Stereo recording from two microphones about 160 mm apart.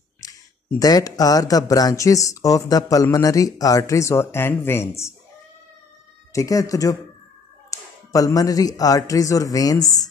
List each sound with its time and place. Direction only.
0.2 s a sound: 20° left (ahead or behind)
0.7 s speech: 25° left (ahead or behind)
6.3 s speech: 20° left (ahead or behind)